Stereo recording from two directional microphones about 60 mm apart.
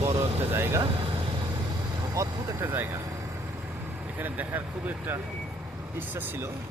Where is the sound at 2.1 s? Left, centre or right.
Right.